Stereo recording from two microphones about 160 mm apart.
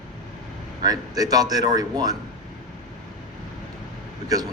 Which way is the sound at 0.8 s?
25° right (ahead or behind).